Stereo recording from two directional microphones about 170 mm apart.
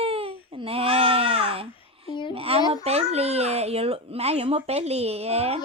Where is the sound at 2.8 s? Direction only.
40° right (ahead or behind).